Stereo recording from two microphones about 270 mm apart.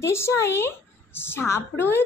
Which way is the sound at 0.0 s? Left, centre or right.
Centre.